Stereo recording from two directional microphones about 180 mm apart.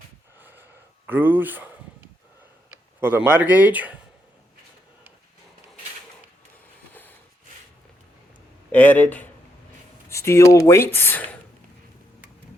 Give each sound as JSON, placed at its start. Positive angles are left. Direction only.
{"t": 0.3, "sound": "a sound", "side_deg": -10}
{"t": 1.0, "sound": "speech", "side_deg": -10}
{"t": 3.0, "sound": "speech", "side_deg": -10}
{"t": 8.7, "sound": "speech", "side_deg": 10}